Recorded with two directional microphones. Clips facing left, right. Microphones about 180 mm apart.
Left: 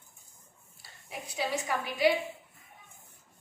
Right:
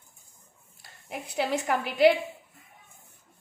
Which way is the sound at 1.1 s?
60° right (ahead or behind).